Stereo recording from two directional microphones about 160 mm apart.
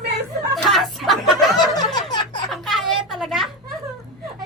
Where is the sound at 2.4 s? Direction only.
Centre (ahead or behind).